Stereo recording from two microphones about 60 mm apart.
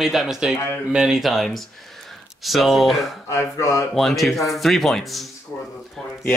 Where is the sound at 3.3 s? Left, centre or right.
Left.